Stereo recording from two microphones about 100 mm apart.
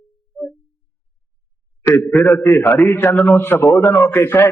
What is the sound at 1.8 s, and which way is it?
Speech, 25° left (ahead or behind).